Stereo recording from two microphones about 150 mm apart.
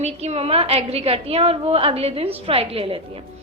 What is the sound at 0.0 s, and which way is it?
A woman's voice, 45° right (ahead or behind).